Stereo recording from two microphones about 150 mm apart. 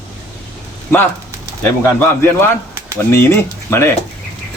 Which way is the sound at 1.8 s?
15° left (ahead or behind).